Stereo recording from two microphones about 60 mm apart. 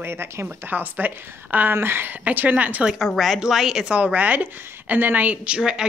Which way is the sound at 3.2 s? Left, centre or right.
Centre.